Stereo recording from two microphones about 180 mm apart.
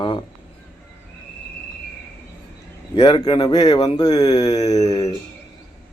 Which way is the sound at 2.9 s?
25° left (ahead or behind).